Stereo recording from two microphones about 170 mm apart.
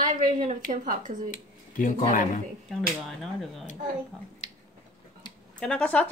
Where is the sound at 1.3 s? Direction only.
50° left (ahead or behind).